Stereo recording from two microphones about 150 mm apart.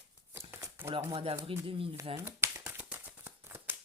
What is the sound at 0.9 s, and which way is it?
Speech, 40° right (ahead or behind).